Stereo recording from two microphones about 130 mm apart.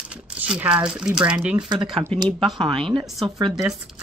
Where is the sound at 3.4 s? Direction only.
30° right (ahead or behind).